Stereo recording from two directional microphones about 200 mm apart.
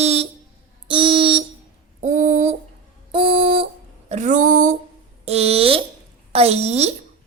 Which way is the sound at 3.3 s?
25° right (ahead or behind).